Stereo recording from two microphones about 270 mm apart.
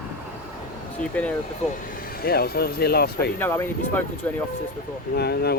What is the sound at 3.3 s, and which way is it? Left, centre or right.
Speech, centre.